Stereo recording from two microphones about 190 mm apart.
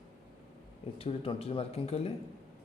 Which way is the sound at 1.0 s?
30° left (ahead or behind).